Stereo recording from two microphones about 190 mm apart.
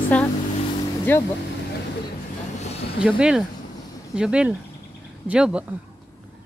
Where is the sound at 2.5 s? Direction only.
35° left (ahead or behind).